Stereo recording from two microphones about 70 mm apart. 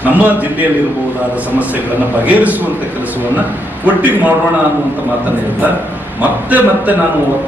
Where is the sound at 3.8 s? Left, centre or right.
Right.